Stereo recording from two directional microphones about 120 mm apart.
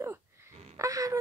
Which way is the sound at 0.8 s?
30° right (ahead or behind).